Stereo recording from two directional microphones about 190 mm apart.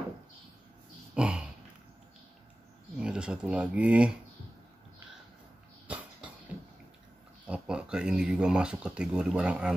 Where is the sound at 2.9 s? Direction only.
5° right (ahead or behind).